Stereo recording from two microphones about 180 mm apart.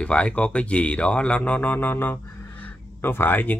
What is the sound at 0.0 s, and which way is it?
Speech, 5° left (ahead or behind).